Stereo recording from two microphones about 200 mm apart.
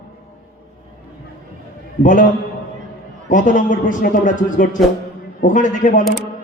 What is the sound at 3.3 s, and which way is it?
A man's voice, 40° left (ahead or behind).